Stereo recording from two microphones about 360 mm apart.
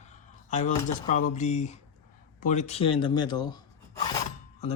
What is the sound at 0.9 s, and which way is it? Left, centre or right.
Speech, left.